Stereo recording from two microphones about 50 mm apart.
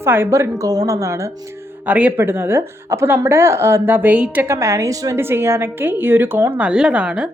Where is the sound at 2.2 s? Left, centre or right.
Right.